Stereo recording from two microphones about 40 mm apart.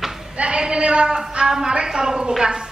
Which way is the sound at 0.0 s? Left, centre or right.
Centre.